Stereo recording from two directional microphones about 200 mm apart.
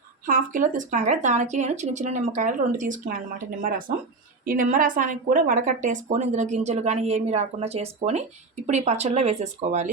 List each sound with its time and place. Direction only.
0.3 s a woman's voice: 40° right (ahead or behind)